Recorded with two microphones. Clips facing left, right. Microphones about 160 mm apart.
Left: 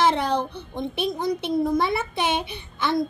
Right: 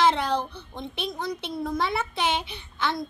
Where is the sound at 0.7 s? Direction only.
50° left (ahead or behind).